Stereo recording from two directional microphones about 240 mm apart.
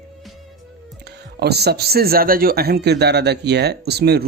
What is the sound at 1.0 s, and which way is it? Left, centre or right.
Speech, right.